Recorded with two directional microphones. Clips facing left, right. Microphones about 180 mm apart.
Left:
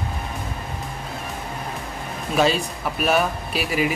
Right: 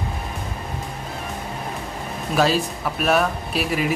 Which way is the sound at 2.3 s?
Centre (ahead or behind).